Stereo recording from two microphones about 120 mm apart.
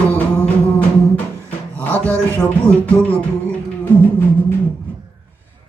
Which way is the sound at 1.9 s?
10° left (ahead or behind).